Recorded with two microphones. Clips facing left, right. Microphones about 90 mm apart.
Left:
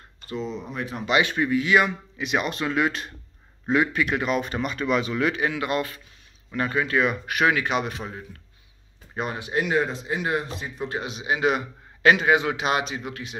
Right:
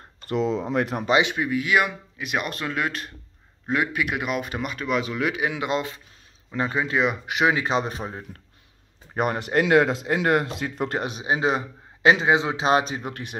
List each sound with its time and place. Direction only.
0.3 s speech: 90° right; by 1.0 s 65° right (ahead or behind)
1.3 s speech: 5° right (ahead or behind)
7.6 s a man's voice: 30° right (ahead or behind)
9.1 s speech: 55° right (ahead or behind)
11.1 s a man's voice: 35° right (ahead or behind); by 13.4 s 50° right (ahead or behind)